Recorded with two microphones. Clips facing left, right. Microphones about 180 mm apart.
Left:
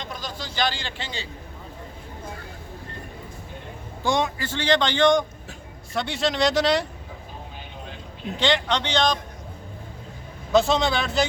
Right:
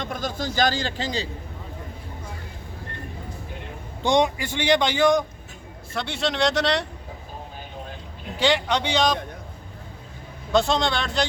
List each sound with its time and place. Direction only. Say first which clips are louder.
0.0 s a man's voice: right 6 dB; 50° right (ahead or behind)
4.0 s a man's voice: right 4 dB; 20° right (ahead or behind); by 6.8 s centre (ahead or behind)
8.4 s a man's voice: right 1 dB; 10° right (ahead or behind)
10.5 s speech: left 1 dB; centre (ahead or behind)